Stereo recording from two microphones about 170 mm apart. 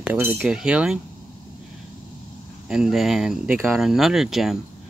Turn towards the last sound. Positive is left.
turn(degrees=0)  # may be behind; listen again after turning